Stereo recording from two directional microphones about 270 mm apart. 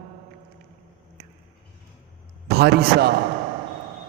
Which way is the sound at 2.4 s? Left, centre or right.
Right.